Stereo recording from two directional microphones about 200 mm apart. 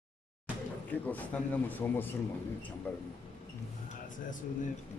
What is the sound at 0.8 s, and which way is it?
Speech, 10° left (ahead or behind).